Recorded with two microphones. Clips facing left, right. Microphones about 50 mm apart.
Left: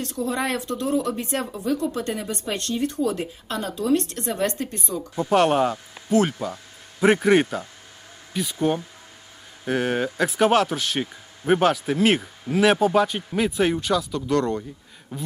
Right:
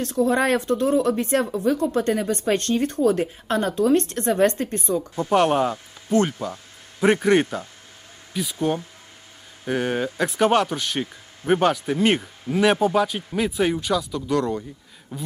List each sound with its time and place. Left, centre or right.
0.0 s a woman's voice: right
5.1 s speech: centre